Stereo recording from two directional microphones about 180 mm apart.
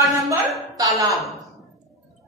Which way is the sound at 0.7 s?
20° right (ahead or behind).